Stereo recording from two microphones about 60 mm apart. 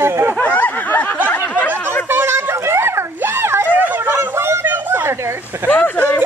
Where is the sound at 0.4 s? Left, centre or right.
Left.